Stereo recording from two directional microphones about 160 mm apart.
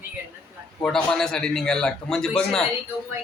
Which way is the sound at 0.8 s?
5° left (ahead or behind).